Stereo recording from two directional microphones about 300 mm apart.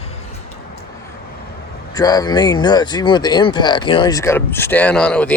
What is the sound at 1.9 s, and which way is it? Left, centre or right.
Speech, centre.